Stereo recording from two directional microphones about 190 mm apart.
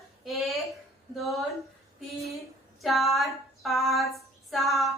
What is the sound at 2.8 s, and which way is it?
Female singing, centre (ahead or behind).